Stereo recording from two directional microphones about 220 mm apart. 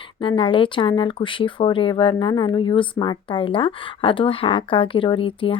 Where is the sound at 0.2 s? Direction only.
25° left (ahead or behind).